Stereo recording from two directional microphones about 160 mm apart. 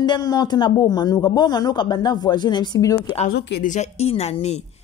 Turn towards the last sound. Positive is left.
turn(degrees=45)  # may be behind; listen again after turning